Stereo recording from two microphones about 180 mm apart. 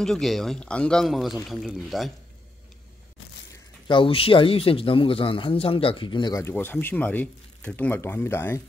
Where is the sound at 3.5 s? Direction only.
25° left (ahead or behind).